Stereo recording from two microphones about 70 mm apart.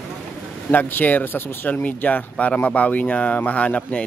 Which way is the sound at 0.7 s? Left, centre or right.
Left.